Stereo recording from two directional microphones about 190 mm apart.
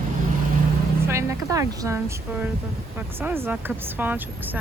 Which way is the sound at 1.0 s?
15° right (ahead or behind).